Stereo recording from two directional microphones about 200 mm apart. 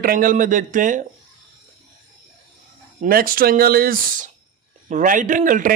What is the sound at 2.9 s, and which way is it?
A man's voice, 45° right (ahead or behind).